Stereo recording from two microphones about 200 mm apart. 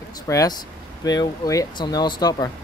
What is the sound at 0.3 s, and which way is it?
Speech, 15° left (ahead or behind).